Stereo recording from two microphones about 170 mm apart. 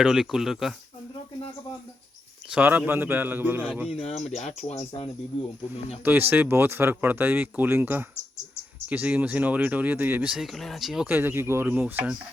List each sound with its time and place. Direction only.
0.0 s speech: 5° right (ahead or behind)
2.5 s speech: 10° right (ahead or behind)
3.9 s speech: 35° left (ahead or behind)
6.3 s speech: 10° right (ahead or behind)